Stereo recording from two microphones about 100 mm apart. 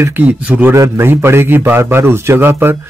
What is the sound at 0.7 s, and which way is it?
Speech, 25° right (ahead or behind).